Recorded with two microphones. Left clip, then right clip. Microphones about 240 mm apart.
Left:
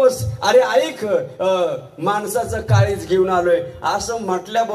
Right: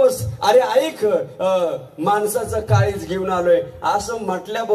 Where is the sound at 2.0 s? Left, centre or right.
Right.